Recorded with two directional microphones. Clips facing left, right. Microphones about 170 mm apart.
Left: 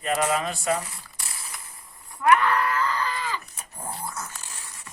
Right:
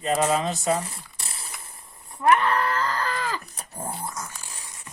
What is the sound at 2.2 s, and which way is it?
Groan, 25° right (ahead or behind).